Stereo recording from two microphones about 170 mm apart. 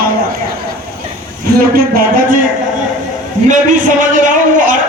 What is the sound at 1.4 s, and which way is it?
A man's voice, 60° right (ahead or behind).